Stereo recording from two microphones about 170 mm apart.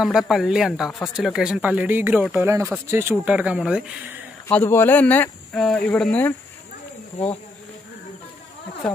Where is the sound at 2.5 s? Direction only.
15° right (ahead or behind).